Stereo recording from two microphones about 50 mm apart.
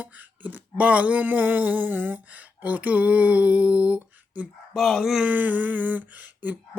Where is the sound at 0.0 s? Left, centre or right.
Right.